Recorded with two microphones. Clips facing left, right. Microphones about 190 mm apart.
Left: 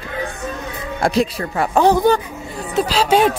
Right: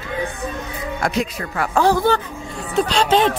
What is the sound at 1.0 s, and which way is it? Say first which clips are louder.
Speech: left 5 dB; 30° left (ahead or behind).